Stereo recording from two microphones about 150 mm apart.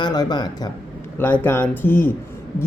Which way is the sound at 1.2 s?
15° left (ahead or behind).